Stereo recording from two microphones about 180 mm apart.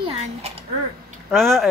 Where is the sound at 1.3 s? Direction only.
Centre (ahead or behind).